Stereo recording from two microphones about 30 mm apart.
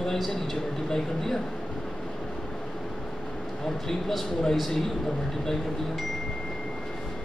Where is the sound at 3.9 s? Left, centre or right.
Centre.